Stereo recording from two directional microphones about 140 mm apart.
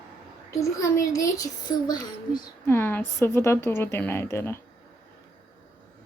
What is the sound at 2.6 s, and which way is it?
A woman's voice, 15° left (ahead or behind).